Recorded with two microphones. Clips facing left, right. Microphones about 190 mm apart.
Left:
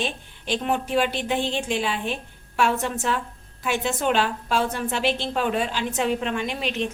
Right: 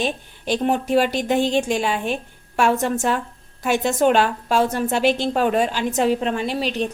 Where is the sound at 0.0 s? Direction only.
40° right (ahead or behind).